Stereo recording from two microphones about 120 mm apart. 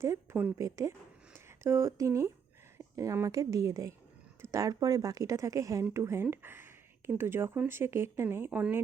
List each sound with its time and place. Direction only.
0.0 s speech: 25° right (ahead or behind)